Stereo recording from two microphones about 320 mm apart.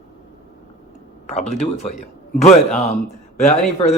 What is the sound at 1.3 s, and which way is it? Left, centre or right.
Speech, centre.